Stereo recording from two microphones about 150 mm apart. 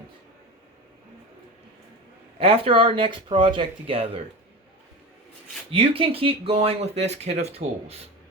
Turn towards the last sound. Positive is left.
turn(degrees=-45)  # may be behind; listen again after turning